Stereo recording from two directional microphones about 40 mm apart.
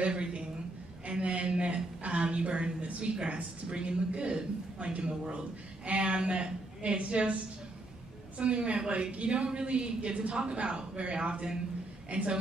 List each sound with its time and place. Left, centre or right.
0.0 s a woman's voice: right
8.4 s a woman's voice: right